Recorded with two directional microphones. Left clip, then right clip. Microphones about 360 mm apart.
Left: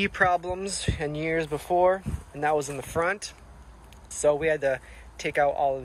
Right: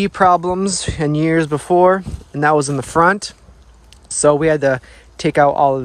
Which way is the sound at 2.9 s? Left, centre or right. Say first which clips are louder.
Right 14 dB; centre.